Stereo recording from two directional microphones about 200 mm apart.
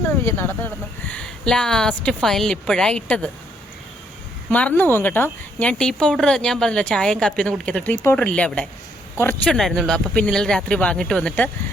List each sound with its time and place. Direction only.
0.3 s a woman's voice: 10° left (ahead or behind)
4.4 s a woman's voice: 5° left (ahead or behind)